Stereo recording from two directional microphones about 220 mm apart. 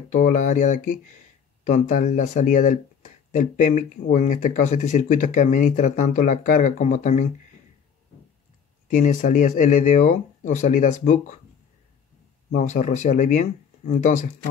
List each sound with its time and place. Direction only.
0.1 s speech: 35° left (ahead or behind)
8.8 s speech: 35° left (ahead or behind)
12.4 s speech: 35° left (ahead or behind)